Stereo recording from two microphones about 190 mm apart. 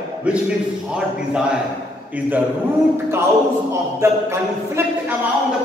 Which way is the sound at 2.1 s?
10° right (ahead or behind).